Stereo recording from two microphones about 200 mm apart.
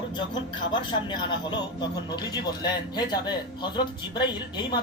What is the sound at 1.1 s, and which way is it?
Speech, 20° left (ahead or behind).